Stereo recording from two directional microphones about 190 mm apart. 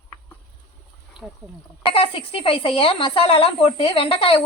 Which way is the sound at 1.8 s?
30° left (ahead or behind).